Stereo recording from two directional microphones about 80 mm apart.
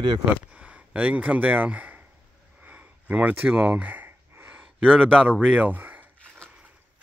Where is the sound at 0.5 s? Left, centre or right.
Centre.